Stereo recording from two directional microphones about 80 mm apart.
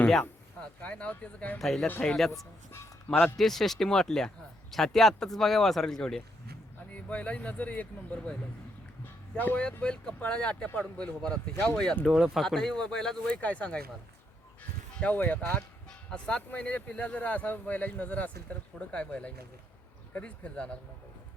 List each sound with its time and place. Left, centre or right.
0.1 s speech: centre
1.5 s speech: centre
6.9 s speech: centre
9.4 s speech: left
9.8 s speech: centre
12.0 s speech: centre
15.0 s speech: centre